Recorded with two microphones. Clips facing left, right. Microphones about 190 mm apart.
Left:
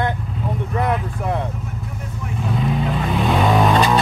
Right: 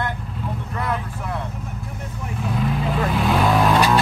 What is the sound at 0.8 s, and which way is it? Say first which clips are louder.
Speech: left 5 dB; 20° left (ahead or behind).